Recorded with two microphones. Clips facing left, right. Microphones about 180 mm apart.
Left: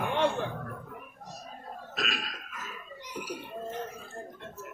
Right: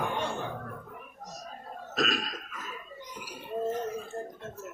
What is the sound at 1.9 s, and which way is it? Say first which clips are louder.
Burping: right 6 dB; 40° right (ahead or behind).